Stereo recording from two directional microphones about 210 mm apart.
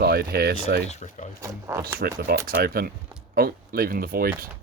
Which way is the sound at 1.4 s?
15° right (ahead or behind).